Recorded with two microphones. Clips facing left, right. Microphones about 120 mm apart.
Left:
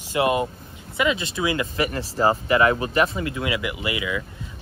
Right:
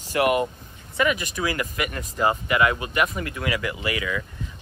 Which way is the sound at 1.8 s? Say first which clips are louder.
Left 2 dB; 35° left (ahead or behind).